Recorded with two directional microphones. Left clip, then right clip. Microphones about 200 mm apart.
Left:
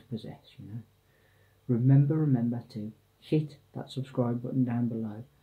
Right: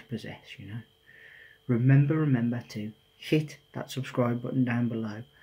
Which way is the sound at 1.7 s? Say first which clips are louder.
Right 1 dB; 10° right (ahead or behind).